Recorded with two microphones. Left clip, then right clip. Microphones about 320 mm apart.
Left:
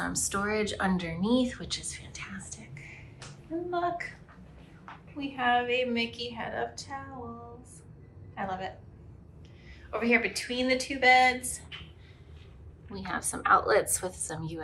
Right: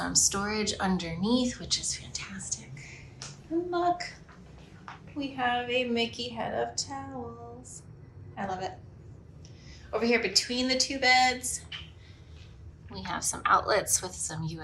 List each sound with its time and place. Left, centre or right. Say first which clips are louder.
0.0 s a woman's voice: right 3 dB; centre
5.1 s a woman's voice: left 2 dB; centre
8.4 s a woman's voice: right 1 dB; centre
9.9 s a woman's voice: right 1 dB; centre
12.9 s a woman's voice: right 1 dB; centre